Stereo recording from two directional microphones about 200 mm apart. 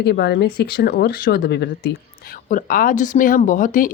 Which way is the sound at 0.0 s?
55° left (ahead or behind).